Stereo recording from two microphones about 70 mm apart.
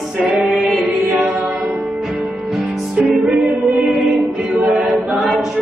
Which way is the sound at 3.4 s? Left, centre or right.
Centre.